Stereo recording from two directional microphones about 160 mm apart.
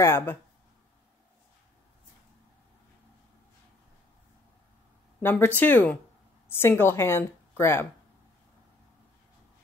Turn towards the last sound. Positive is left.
turn(degrees=15)  # may be behind; listen again after turning